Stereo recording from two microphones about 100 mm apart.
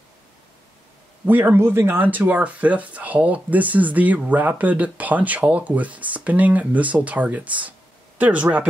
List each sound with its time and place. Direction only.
1.2 s speech: 20° right (ahead or behind)